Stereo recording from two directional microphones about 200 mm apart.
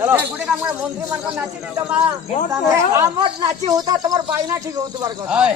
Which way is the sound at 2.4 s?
15° right (ahead or behind).